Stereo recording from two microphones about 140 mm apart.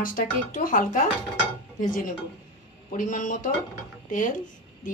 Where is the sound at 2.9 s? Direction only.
65° left (ahead or behind).